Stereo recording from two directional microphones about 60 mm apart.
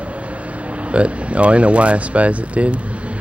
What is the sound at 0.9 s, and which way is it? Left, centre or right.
Speech, right.